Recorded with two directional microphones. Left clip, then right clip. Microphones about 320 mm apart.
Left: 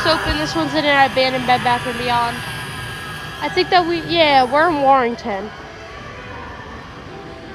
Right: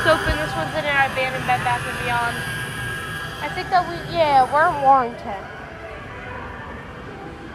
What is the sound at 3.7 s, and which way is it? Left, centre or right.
Speech, left.